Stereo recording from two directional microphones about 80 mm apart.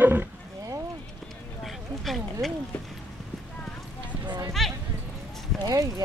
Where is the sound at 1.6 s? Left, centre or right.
Centre.